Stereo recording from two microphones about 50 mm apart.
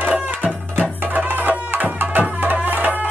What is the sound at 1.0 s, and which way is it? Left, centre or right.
Music, right.